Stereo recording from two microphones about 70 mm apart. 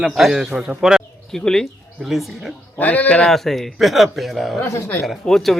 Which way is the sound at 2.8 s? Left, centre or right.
Left.